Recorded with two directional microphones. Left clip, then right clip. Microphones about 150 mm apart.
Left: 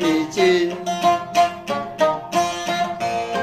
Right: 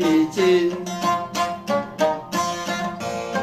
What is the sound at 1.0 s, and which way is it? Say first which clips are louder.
Music: left 5 dB; 30° right (ahead or behind).